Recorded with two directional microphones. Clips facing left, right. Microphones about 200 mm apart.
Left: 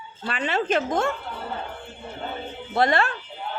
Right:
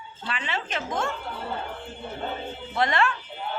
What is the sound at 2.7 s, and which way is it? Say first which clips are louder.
Speech: left 3 dB; 35° left (ahead or behind).